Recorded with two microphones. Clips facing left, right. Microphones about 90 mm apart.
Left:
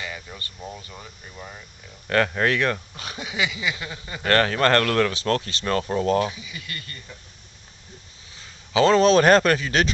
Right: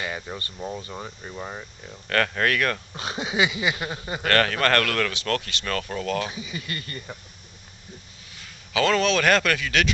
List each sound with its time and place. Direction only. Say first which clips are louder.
0.0 s a sound: right 4 dB; 45° right (ahead or behind)
0.4 s speech: right 4 dB; 35° right (ahead or behind)
2.0 s speech: left 2 dB; 15° left (ahead or behind)
2.9 s a sound: right 5 dB; 25° right (ahead or behind)
4.2 s speech: left 2 dB; 25° left (ahead or behind)
6.3 s speech: right 4 dB; 30° right (ahead or behind)
8.4 s a man's voice: left 4 dB; 30° left (ahead or behind)